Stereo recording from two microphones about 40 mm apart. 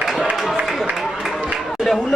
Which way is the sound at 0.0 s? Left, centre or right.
Centre.